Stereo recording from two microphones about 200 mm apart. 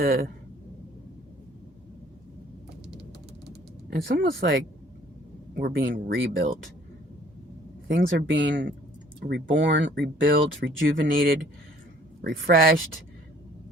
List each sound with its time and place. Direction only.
0.0 s speech: 50° right (ahead or behind)
4.1 s speech: 50° right (ahead or behind)
7.9 s speech: 65° right (ahead or behind)
10.8 s speech: 45° right (ahead or behind)